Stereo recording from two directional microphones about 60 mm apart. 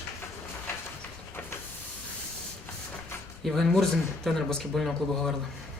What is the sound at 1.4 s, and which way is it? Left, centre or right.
Hiss, left.